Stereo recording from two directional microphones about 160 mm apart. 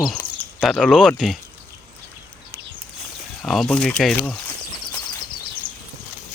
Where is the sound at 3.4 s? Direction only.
Centre (ahead or behind).